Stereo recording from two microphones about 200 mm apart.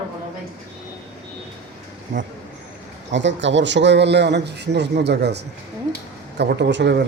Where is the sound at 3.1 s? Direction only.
65° right (ahead or behind).